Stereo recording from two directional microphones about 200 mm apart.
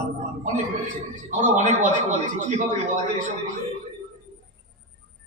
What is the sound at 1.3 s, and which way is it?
A man's voice, 40° right (ahead or behind).